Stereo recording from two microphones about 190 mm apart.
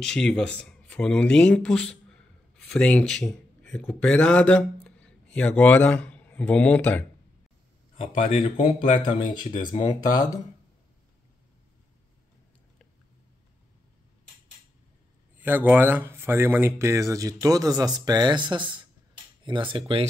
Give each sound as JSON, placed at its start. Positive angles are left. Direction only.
{"t": 0.0, "sound": "speech", "side_deg": 5}
{"t": 8.2, "sound": "speech", "side_deg": 30}
{"t": 9.6, "sound": "speech", "side_deg": 25}
{"t": 15.3, "sound": "speech", "side_deg": -10}